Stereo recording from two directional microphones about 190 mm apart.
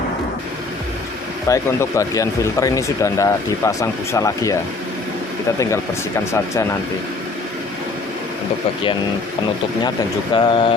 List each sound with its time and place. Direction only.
1.5 s speech: 15° left (ahead or behind)
5.5 s speech: 15° left (ahead or behind)
10.3 s speech: 25° left (ahead or behind)